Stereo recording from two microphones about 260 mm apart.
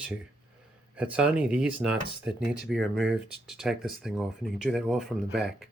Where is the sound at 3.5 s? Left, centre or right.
Centre.